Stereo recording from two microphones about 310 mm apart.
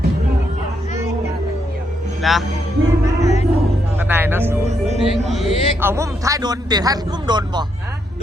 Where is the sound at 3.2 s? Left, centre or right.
Left.